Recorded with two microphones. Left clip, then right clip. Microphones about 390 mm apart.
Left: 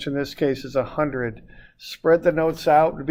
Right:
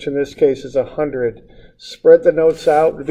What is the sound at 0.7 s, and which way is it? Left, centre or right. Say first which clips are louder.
Speech: right 5 dB; left.